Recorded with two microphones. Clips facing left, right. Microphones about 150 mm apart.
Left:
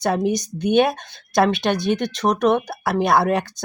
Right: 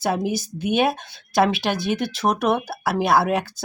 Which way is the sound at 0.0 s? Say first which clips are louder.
Left 3 dB; 5° right (ahead or behind).